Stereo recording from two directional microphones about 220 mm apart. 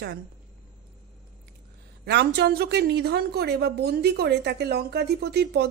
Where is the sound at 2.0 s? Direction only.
50° right (ahead or behind).